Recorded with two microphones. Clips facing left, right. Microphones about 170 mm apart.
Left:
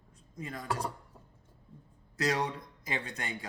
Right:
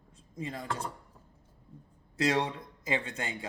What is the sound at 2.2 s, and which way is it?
Speech, 25° right (ahead or behind).